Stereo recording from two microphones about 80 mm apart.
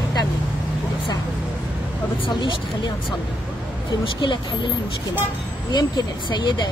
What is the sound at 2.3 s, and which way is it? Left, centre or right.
Speech, left.